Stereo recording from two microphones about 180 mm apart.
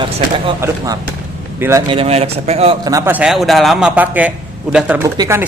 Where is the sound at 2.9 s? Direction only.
15° right (ahead or behind).